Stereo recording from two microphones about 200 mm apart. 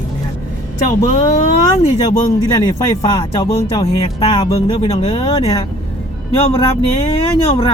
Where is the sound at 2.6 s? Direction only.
20° left (ahead or behind).